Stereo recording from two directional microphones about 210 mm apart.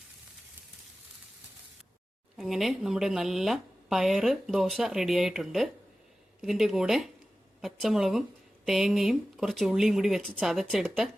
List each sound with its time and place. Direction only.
2.3 s speech: centre (ahead or behind)